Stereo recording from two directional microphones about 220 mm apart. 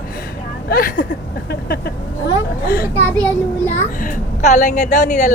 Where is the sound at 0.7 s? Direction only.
40° left (ahead or behind).